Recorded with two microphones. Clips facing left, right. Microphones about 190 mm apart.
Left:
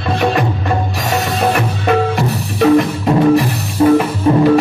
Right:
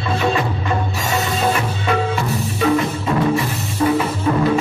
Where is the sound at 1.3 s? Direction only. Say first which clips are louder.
Left 4 dB; 60° left (ahead or behind).